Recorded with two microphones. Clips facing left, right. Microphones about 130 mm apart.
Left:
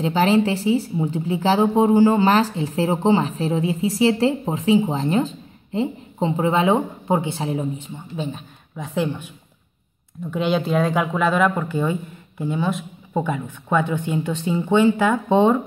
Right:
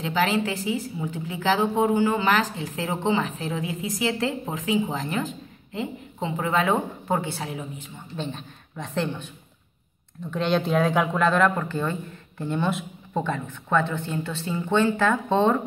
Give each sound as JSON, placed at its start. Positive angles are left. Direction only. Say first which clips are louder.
{"t": 0.0, "sound": "speech", "louder": "left 6 dB", "side_deg": 30}
{"t": 8.2, "sound": "speech", "louder": "left 3 dB", "side_deg": 5}
{"t": 10.3, "sound": "speech", "louder": "left 2 dB", "side_deg": 5}
{"t": 13.1, "sound": "speech", "louder": "left 3 dB", "side_deg": 10}